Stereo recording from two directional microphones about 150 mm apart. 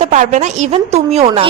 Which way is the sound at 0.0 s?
50° right (ahead or behind).